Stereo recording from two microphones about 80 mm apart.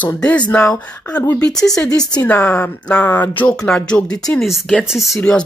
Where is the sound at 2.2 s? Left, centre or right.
Centre.